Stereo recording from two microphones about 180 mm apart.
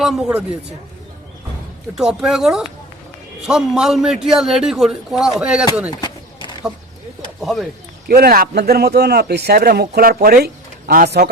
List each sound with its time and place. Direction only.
0.0 s a man's voice: centre (ahead or behind)
2.0 s a man's voice: 5° right (ahead or behind)
5.9 s a sound: 25° left (ahead or behind)
7.4 s a man's voice: centre (ahead or behind)
8.0 s speech: 55° right (ahead or behind)